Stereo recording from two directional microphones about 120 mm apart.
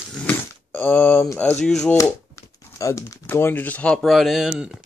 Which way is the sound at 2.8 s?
25° left (ahead or behind).